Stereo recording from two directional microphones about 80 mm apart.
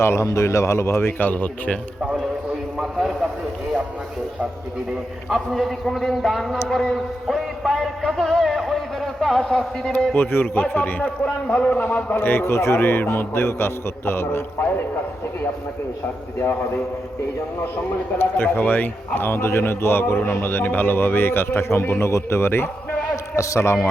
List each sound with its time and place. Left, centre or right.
0.0 s speech: left; by 1.8 s centre
2.7 s a man's voice: centre
5.3 s a man's voice: centre
6.7 s a sound: centre
10.2 s a man's voice: left
16.4 s a man's voice: left
18.2 s a man's voice: left
23.1 s a man's voice: left